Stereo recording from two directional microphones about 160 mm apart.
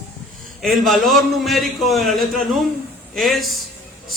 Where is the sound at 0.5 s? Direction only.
Centre (ahead or behind).